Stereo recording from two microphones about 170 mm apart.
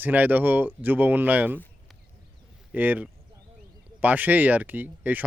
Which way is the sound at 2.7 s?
10° right (ahead or behind).